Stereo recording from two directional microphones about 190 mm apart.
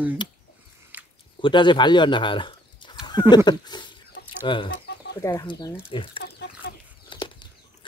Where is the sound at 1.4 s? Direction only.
25° left (ahead or behind).